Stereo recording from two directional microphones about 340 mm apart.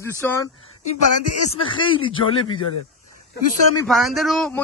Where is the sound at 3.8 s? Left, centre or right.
Centre.